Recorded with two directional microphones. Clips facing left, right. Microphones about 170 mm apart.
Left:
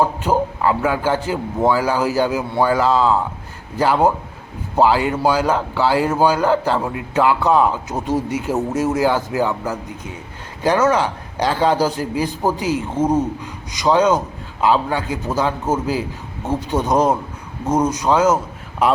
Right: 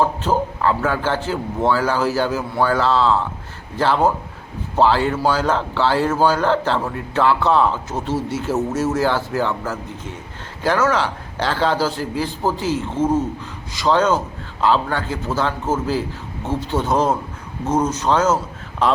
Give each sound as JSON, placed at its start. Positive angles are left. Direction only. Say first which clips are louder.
{"t": 0.0, "sound": "a man's voice", "louder": "left 1 dB", "side_deg": 10}